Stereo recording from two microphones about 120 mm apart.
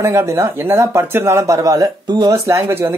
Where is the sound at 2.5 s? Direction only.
25° right (ahead or behind).